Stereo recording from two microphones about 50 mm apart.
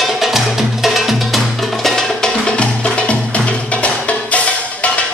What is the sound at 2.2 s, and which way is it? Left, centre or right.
Music, centre.